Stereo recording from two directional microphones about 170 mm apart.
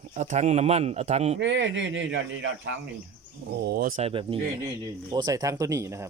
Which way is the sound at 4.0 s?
35° right (ahead or behind).